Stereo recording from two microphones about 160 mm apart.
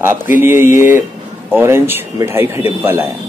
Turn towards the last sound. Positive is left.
turn(degrees=-15)  # may be behind; listen again after turning